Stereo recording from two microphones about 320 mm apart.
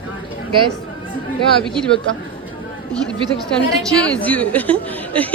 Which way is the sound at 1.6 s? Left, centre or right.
Centre.